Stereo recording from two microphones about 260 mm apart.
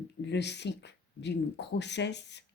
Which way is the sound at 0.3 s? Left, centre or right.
Left.